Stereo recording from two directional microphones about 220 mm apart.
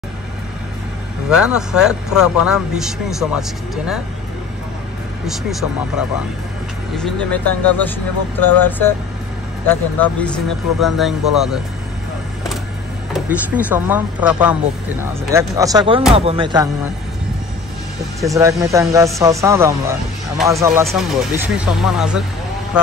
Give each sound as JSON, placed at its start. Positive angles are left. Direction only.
{"t": 1.3, "sound": "speech", "side_deg": -5}
{"t": 5.2, "sound": "speech", "side_deg": 0}
{"t": 13.1, "sound": "speech", "side_deg": -5}
{"t": 18.2, "sound": "speech", "side_deg": -15}